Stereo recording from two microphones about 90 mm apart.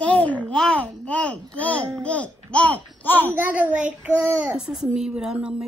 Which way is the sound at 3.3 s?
20° right (ahead or behind).